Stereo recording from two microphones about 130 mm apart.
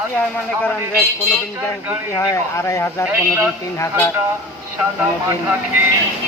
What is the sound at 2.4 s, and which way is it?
Speech, 20° left (ahead or behind).